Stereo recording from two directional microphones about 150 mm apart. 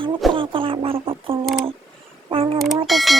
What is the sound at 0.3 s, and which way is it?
Speech, 35° right (ahead or behind).